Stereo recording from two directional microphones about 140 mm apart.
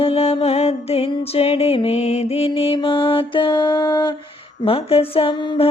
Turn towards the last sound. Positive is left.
turn(degrees=35)  # may be behind; listen again after turning